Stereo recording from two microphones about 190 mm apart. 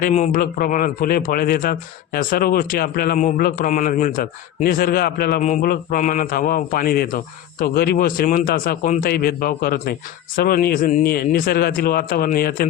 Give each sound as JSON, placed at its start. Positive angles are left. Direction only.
{"t": 0.0, "sound": "speech", "side_deg": 40}
{"t": 5.4, "sound": "speech", "side_deg": 40}